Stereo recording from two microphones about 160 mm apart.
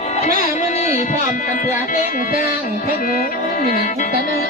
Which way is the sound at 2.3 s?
60° left (ahead or behind).